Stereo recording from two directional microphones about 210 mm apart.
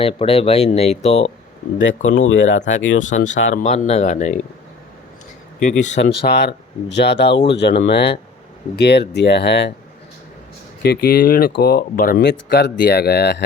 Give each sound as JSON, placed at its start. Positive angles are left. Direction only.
{"t": 0.0, "sound": "speech", "side_deg": 25}
{"t": 1.8, "sound": "speech", "side_deg": 65}
{"t": 3.0, "sound": "speech", "side_deg": 35}
{"t": 5.8, "sound": "speech", "side_deg": 35}
{"t": 6.2, "sound": "speech", "side_deg": 55}
{"t": 10.8, "sound": "speech", "side_deg": 45}